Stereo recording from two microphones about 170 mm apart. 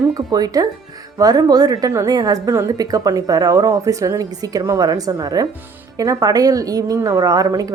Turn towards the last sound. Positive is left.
turn(degrees=-20)  # may be behind; listen again after turning